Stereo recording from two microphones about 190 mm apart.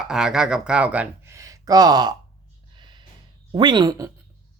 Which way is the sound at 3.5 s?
25° right (ahead or behind).